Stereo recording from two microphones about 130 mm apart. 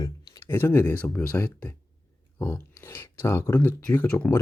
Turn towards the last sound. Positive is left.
turn(degrees=15)  # may be behind; listen again after turning